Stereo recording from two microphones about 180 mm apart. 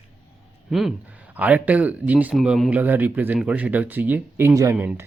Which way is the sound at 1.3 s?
10° right (ahead or behind).